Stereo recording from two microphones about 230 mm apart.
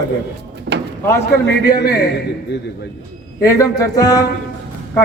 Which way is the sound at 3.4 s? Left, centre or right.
Centre.